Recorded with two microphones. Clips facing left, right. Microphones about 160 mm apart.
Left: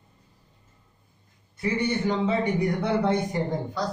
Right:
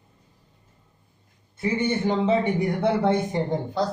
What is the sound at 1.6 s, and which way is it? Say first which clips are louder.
A man's voice: right 2 dB; 25° right (ahead or behind).